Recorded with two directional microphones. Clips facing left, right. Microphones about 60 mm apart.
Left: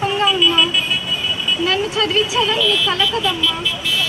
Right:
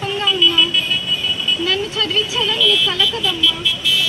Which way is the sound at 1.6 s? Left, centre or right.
Left.